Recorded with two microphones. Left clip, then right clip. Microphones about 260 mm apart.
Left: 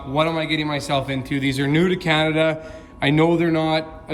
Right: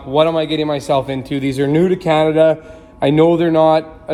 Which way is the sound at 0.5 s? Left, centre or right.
Left.